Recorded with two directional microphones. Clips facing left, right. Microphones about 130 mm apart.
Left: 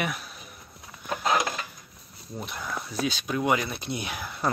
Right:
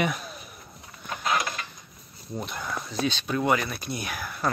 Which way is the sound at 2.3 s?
Centre (ahead or behind).